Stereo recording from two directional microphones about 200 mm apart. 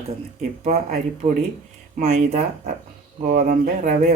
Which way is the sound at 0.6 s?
35° right (ahead or behind).